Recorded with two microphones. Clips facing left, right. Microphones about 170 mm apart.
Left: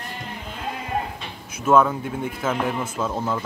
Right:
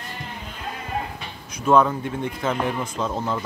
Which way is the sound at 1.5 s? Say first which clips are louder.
Even; 5° left (ahead or behind).